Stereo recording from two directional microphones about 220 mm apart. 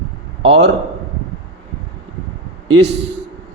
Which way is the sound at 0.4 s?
50° right (ahead or behind).